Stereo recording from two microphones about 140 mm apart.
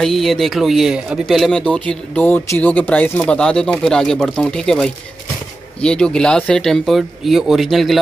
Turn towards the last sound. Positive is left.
turn(degrees=0)  # may be behind; listen again after turning